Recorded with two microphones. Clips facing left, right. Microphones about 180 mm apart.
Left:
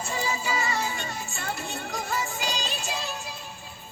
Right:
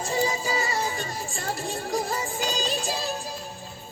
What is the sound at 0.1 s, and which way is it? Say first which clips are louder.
Music: right 4 dB; 35° right (ahead or behind).